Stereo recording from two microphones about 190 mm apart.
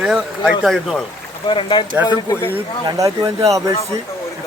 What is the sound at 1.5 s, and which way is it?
Speech, 25° left (ahead or behind).